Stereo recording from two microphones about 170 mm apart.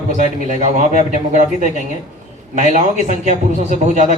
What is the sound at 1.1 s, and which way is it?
A man's voice, 45° right (ahead or behind).